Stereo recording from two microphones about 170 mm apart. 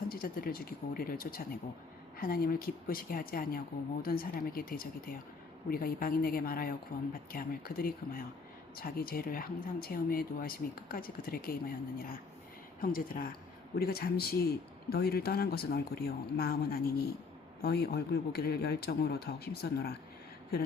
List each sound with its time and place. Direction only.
0.1 s a man's voice: 60° left (ahead or behind)